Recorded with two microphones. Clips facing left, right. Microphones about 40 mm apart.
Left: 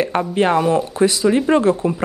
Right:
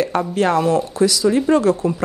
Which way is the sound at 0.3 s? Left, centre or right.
Left.